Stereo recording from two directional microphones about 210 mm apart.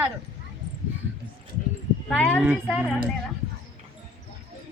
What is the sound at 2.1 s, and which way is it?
Speech, 5° left (ahead or behind).